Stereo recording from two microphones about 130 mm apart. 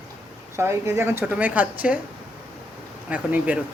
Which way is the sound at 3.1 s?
10° right (ahead or behind).